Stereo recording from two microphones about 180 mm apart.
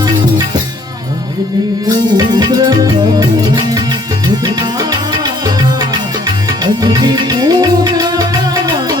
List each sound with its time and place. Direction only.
2.1 s music: 25° right (ahead or behind)
6.8 s music: 25° right (ahead or behind)